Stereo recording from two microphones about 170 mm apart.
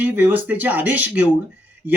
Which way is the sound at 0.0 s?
10° right (ahead or behind).